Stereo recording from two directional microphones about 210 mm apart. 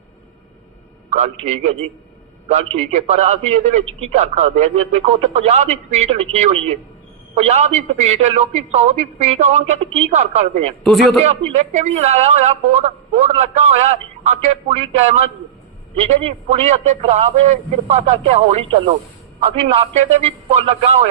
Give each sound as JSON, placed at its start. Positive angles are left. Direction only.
{"t": 1.1, "sound": "a man's voice", "side_deg": -30}
{"t": 2.7, "sound": "a man's voice", "side_deg": -30}
{"t": 10.8, "sound": "a man's voice", "side_deg": 0}
{"t": 11.5, "sound": "a man's voice", "side_deg": -35}